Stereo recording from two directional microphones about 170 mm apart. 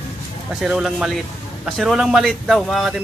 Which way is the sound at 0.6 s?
5° right (ahead or behind).